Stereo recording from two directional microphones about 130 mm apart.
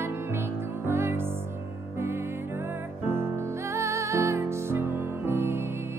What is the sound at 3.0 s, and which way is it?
Music, 20° right (ahead or behind).